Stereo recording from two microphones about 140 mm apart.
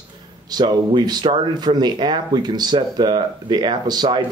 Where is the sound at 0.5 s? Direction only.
30° right (ahead or behind).